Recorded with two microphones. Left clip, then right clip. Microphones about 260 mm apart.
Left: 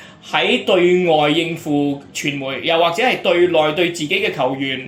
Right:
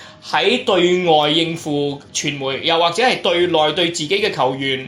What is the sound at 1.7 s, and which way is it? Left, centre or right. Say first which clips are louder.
A man's voice: left 1 dB; right.